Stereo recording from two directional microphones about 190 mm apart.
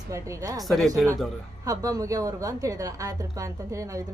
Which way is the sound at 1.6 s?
15° right (ahead or behind).